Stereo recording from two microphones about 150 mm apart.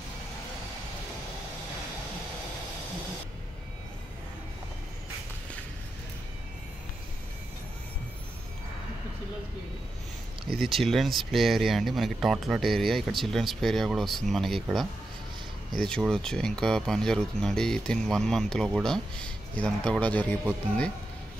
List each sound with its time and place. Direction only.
10.6 s speech: centre (ahead or behind)